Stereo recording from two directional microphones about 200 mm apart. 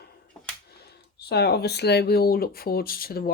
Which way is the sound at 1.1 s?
55° left (ahead or behind).